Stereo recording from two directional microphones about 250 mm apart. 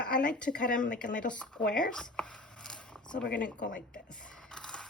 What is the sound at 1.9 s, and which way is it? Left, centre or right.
Speech, centre.